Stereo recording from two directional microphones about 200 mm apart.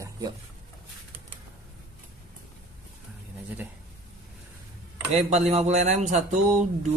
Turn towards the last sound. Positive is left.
turn(degrees=-35)  # may be behind; listen again after turning